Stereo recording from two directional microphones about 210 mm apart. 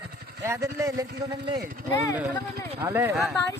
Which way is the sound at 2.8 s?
10° right (ahead or behind).